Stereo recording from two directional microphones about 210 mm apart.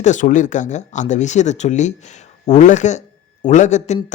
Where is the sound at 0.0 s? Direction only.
35° left (ahead or behind).